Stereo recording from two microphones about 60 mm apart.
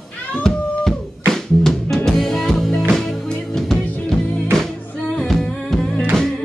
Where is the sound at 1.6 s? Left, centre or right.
Centre.